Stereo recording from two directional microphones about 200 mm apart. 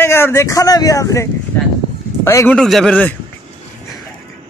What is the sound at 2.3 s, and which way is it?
Speech, 15° left (ahead or behind).